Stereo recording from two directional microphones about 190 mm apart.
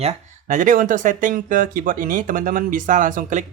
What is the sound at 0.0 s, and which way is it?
Speech, 35° right (ahead or behind).